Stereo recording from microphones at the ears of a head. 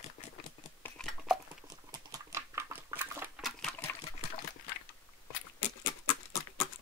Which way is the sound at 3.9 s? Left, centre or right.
Left.